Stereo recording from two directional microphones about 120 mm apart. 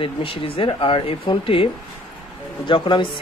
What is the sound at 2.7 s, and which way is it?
Speech, 45° left (ahead or behind).